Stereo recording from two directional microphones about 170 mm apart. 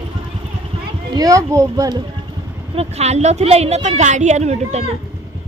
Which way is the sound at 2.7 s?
40° right (ahead or behind).